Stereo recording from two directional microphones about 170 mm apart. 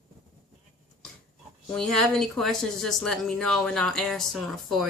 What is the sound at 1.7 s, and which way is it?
Speech, 5° left (ahead or behind).